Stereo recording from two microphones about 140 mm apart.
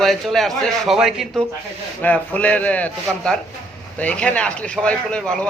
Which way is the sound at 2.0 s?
10° left (ahead or behind).